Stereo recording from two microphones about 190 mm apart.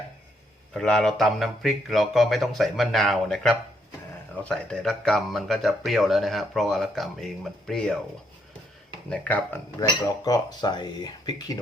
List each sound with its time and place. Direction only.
0.7 s speech: 5° left (ahead or behind)
9.0 s speech: 5° left (ahead or behind)
9.8 s speech: 20° left (ahead or behind)